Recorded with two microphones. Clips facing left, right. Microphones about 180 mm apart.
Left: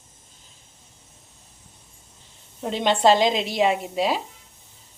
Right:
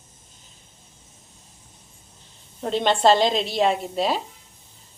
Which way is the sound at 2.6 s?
10° left (ahead or behind).